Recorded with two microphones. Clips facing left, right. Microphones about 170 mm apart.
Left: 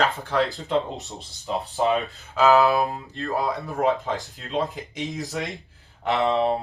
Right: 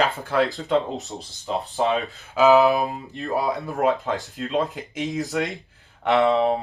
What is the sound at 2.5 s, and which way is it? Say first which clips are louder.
Speech: right 1 dB; 20° right (ahead or behind).